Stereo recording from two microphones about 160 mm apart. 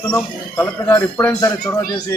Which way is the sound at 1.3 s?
20° left (ahead or behind).